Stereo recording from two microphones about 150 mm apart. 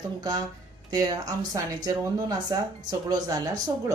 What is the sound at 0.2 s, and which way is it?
A woman's voice, 25° right (ahead or behind).